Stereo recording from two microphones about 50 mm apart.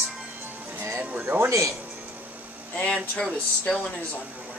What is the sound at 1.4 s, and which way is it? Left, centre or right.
Speech, right.